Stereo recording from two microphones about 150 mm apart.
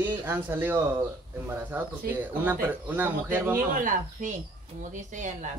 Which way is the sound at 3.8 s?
60° right (ahead or behind).